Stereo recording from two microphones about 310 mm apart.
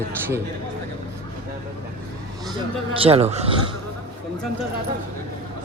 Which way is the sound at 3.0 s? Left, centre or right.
Centre.